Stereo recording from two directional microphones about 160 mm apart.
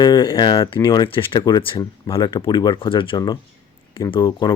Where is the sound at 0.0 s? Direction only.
30° left (ahead or behind).